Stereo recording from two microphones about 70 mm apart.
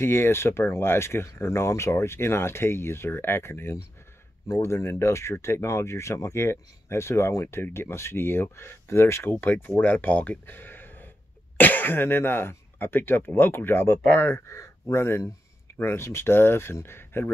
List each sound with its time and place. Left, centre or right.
0.0 s speech: left